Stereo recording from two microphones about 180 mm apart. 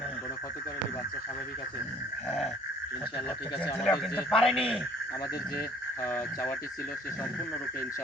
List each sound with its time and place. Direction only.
3.6 s speech: 30° left (ahead or behind)
4.0 s a man's voice: 5° left (ahead or behind)
6.0 s speech: 15° left (ahead or behind)